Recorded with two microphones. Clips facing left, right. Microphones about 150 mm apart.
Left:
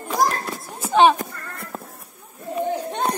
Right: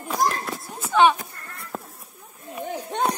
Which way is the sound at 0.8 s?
35° left (ahead or behind).